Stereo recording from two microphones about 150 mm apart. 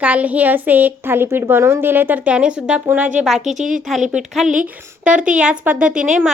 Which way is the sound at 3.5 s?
55° right (ahead or behind).